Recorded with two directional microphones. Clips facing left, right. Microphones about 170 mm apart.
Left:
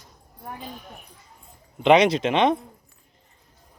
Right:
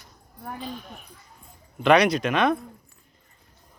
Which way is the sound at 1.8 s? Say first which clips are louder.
Left 2 dB; 20° left (ahead or behind).